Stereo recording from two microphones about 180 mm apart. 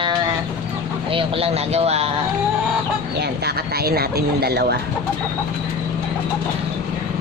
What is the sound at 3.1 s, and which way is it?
Speech, 65° right (ahead or behind).